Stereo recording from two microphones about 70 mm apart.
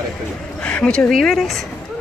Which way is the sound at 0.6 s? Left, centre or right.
Centre.